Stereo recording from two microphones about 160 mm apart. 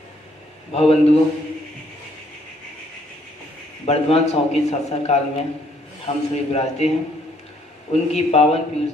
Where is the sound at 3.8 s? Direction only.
40° left (ahead or behind).